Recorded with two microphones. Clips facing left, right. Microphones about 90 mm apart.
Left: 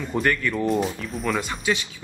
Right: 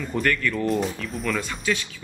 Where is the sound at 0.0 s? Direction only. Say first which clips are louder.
Left 1 dB; 20° left (ahead or behind).